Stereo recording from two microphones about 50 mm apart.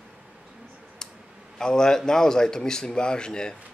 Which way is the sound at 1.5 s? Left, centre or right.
Centre.